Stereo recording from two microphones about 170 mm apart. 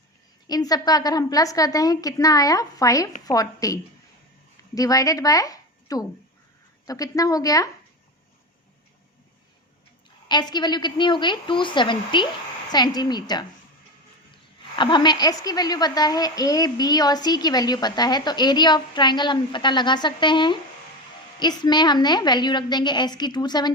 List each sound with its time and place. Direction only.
0.4 s a woman's voice: 20° left (ahead or behind)
10.2 s a woman's voice: 25° left (ahead or behind)
14.8 s a woman's voice: 25° left (ahead or behind)